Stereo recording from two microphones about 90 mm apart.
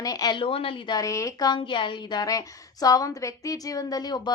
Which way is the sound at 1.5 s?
60° left (ahead or behind).